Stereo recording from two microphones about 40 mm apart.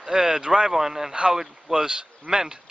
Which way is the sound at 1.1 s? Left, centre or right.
Right.